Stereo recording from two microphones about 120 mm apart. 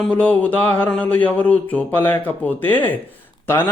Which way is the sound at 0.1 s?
10° left (ahead or behind).